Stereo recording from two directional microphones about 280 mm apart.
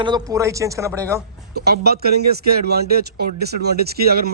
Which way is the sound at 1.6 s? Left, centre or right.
Right.